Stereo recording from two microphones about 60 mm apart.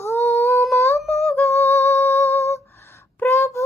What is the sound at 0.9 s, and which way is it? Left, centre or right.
Female singing, centre.